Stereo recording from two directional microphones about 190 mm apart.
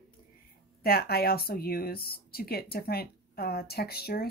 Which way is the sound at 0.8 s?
55° left (ahead or behind).